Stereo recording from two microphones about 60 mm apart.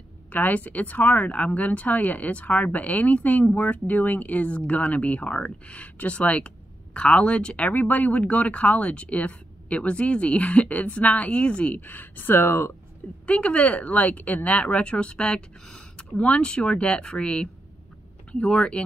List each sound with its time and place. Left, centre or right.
0.3 s speech: left
13.3 s speech: left